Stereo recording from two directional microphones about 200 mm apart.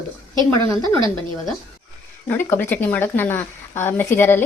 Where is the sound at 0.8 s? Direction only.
25° right (ahead or behind).